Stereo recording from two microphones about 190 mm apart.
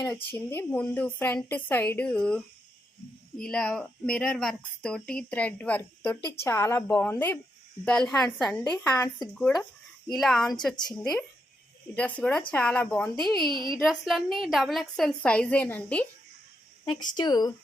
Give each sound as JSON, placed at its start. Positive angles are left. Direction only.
{"t": 0.0, "sound": "a woman's voice", "side_deg": 5}
{"t": 11.9, "sound": "a woman's voice", "side_deg": 5}
{"t": 13.5, "sound": "a woman's voice", "side_deg": -25}
{"t": 13.7, "sound": "a woman's voice", "side_deg": 0}
{"t": 16.8, "sound": "speech", "side_deg": 25}